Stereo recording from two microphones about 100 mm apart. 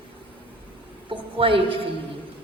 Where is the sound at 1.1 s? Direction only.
60° right (ahead or behind).